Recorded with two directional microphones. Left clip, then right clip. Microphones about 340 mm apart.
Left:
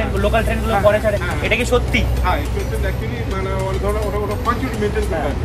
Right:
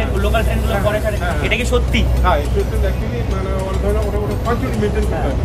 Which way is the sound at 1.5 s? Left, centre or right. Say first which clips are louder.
Left 3 dB; centre.